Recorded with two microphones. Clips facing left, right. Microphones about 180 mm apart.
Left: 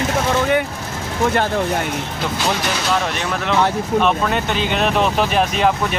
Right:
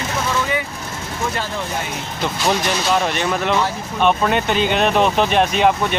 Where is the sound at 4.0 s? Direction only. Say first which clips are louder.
Right 2 dB; centre (ahead or behind).